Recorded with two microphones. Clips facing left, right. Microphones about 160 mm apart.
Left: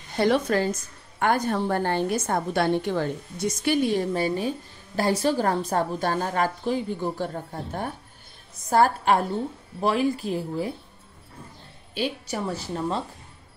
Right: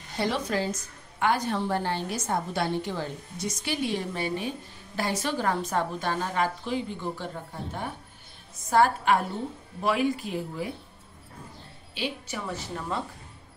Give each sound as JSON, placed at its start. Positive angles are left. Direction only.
{"t": 0.2, "sound": "a woman's voice", "side_deg": 55}
{"t": 8.6, "sound": "a woman's voice", "side_deg": 40}
{"t": 11.9, "sound": "a woman's voice", "side_deg": 40}